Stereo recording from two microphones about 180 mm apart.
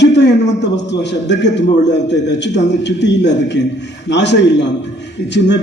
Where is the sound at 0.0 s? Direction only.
75° left (ahead or behind).